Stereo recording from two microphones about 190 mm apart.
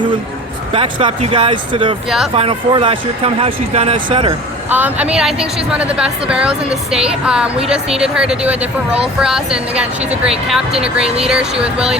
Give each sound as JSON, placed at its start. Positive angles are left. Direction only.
{"t": 0.7, "sound": "speech", "side_deg": -30}
{"t": 2.0, "sound": "a woman's voice", "side_deg": 0}
{"t": 2.3, "sound": "speech", "side_deg": -30}
{"t": 4.7, "sound": "a woman's voice", "side_deg": -10}